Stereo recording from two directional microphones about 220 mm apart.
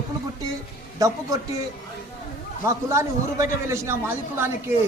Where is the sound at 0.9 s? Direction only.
15° right (ahead or behind).